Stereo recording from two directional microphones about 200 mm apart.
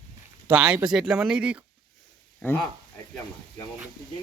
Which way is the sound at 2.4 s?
10° left (ahead or behind).